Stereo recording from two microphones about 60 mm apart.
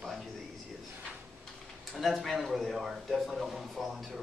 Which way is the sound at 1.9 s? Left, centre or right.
Centre.